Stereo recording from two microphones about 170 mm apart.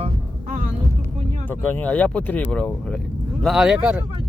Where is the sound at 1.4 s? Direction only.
10° left (ahead or behind).